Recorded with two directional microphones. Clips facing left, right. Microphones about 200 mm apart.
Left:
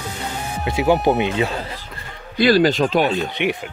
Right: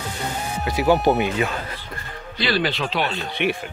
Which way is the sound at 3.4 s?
15° left (ahead or behind).